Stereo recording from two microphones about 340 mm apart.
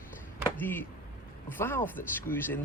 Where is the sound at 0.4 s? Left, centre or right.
Centre.